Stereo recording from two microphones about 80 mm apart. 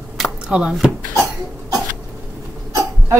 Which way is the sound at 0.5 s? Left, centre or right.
Centre.